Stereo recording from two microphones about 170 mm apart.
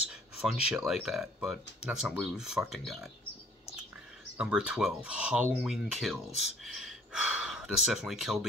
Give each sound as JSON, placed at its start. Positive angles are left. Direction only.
{"t": 0.1, "sound": "a sound", "side_deg": -5}
{"t": 0.8, "sound": "speech", "side_deg": 0}
{"t": 4.4, "sound": "speech", "side_deg": -5}